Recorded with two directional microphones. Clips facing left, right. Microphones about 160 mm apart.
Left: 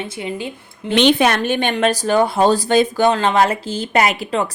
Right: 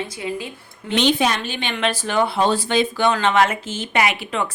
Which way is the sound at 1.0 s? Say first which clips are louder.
Left 5 dB; 65° left (ahead or behind).